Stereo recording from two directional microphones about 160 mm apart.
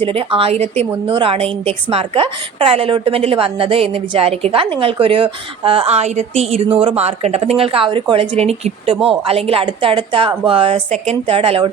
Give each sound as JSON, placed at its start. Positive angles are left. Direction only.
{"t": 0.0, "sound": "a woman's voice", "side_deg": -35}